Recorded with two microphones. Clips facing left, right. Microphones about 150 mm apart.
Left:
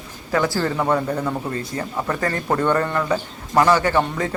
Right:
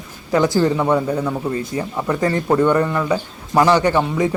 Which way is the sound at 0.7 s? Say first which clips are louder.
Right 3 dB; 5° right (ahead or behind).